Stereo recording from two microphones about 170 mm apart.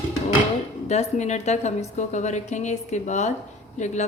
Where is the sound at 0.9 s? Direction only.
40° left (ahead or behind).